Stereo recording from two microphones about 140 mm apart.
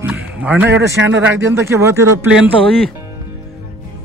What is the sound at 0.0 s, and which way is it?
A man's voice, 10° right (ahead or behind).